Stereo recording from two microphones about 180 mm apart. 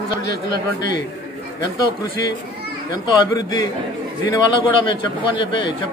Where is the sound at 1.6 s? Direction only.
20° left (ahead or behind).